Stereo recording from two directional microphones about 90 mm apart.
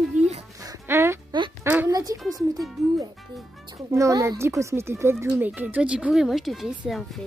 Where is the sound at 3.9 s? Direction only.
35° right (ahead or behind); by 7.2 s 5° right (ahead or behind).